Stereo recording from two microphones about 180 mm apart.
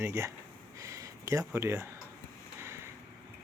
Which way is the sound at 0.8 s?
15° right (ahead or behind).